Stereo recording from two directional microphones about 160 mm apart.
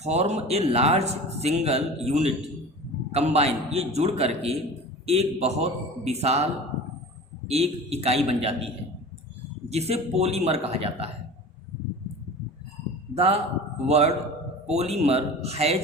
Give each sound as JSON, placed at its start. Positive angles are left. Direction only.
{"t": 0.0, "sound": "speech", "side_deg": -45}
{"t": 13.1, "sound": "speech", "side_deg": -40}